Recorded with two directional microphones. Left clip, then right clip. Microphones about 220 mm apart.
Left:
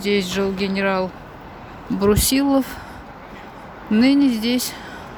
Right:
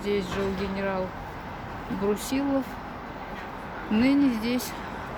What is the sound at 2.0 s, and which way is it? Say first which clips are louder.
Speech: left 10 dB; 40° left (ahead or behind).